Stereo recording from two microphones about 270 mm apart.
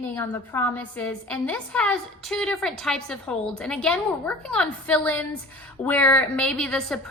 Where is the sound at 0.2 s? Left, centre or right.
Centre.